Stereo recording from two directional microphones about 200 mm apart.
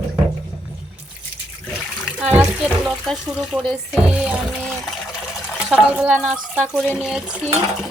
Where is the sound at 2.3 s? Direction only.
5° right (ahead or behind).